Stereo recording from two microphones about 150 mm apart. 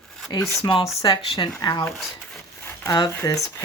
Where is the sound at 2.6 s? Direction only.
20° left (ahead or behind).